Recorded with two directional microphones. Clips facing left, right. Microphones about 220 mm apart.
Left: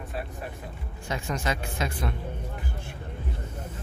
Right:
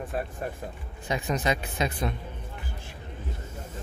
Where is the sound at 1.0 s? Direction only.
20° right (ahead or behind).